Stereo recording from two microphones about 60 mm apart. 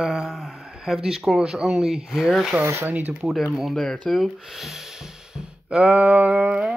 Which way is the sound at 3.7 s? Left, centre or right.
Centre.